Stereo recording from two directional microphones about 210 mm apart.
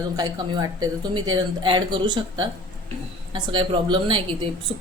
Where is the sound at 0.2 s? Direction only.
20° right (ahead or behind).